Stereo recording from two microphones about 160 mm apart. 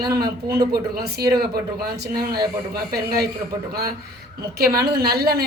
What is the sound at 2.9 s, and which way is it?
Speech, 75° right (ahead or behind).